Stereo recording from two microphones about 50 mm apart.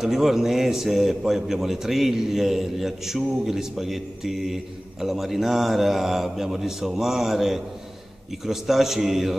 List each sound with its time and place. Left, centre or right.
0.0 s a man's voice: centre